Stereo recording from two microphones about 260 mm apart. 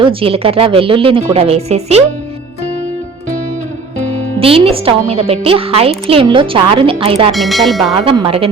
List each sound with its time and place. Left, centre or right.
0.0 s a woman's voice: right
4.4 s a woman's voice: right
7.3 s speech: centre
8.0 s a woman's voice: centre